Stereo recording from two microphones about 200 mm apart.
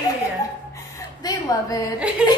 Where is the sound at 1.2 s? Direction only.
20° left (ahead or behind).